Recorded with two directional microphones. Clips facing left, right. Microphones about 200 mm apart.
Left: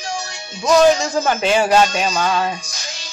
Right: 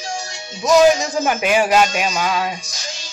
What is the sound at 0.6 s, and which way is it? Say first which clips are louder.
Speech: even; 15° right (ahead or behind).